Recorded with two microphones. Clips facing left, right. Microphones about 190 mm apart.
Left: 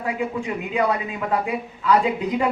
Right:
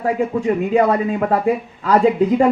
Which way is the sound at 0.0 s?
40° right (ahead or behind).